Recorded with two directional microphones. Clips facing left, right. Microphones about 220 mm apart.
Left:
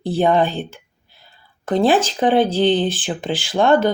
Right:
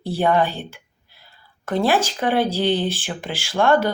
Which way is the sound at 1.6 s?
20° left (ahead or behind).